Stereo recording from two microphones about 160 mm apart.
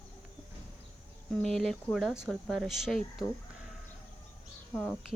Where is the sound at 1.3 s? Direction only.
5° left (ahead or behind).